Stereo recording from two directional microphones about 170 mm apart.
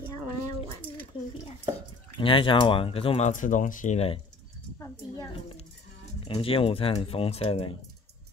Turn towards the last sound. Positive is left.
turn(degrees=35)  # may be behind; listen again after turning